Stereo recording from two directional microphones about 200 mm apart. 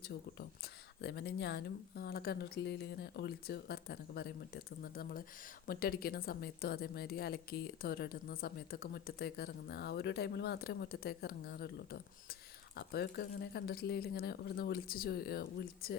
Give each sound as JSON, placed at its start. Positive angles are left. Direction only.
{"t": 0.3, "sound": "a woman's voice", "side_deg": 55}